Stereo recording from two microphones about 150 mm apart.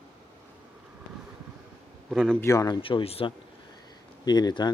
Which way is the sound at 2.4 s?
25° left (ahead or behind).